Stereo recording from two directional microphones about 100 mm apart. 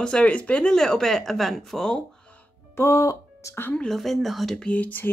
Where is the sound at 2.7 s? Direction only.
30° left (ahead or behind).